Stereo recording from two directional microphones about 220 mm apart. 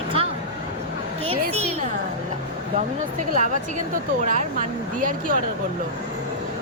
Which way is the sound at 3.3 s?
35° right (ahead or behind).